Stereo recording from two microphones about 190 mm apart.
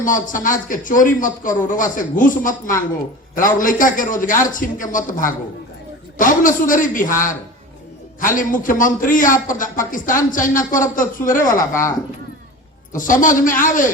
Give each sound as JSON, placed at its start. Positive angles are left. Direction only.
{"t": 0.0, "sound": "a man's voice", "side_deg": 45}
{"t": 11.5, "sound": "a woman's voice", "side_deg": 15}
{"t": 12.9, "sound": "a man's voice", "side_deg": 45}